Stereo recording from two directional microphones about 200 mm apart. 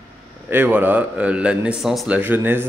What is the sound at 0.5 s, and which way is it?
A man's voice, 10° right (ahead or behind).